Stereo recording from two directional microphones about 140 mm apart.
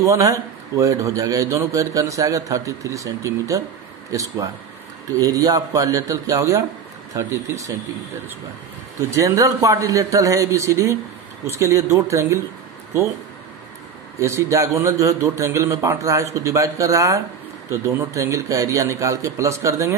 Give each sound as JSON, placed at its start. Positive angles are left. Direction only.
{"t": 0.0, "sound": "a man's voice", "side_deg": -20}
{"t": 9.1, "sound": "a man's voice", "side_deg": -25}
{"t": 14.2, "sound": "a man's voice", "side_deg": -20}